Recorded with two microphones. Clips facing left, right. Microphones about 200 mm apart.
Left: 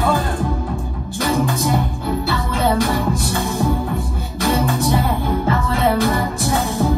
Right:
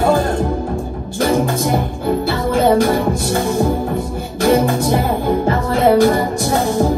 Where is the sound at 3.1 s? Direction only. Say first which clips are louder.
Right 4 dB; 50° right (ahead or behind).